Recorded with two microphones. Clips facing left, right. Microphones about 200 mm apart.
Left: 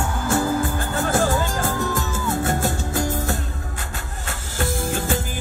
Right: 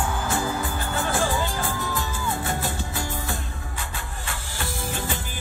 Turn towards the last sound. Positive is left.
turn(degrees=45)  # may be behind; listen again after turning